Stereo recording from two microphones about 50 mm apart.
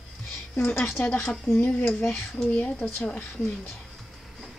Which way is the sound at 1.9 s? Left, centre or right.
Left.